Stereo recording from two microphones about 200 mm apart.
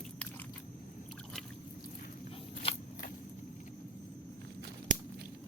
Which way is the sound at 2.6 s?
30° left (ahead or behind).